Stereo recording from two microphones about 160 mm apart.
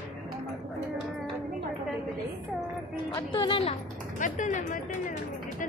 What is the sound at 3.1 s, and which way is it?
Speech, 30° left (ahead or behind).